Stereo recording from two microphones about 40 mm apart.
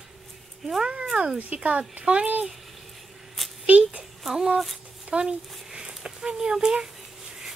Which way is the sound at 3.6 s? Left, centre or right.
Right.